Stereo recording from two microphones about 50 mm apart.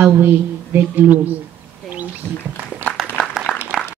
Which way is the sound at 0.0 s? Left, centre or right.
Right.